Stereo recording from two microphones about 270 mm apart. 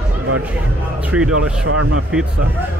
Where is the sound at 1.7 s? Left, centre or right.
Right.